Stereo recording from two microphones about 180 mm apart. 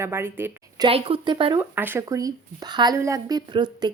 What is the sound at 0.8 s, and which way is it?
Speech, 30° right (ahead or behind).